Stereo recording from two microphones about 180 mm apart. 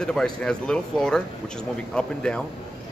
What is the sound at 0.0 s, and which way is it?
Speech, 5° left (ahead or behind).